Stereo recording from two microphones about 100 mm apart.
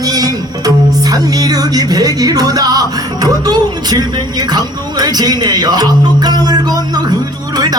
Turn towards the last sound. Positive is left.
turn(degrees=-40)  # may be behind; listen again after turning